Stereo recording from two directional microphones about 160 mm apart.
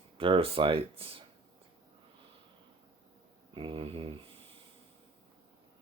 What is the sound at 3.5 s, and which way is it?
Speech, 35° right (ahead or behind).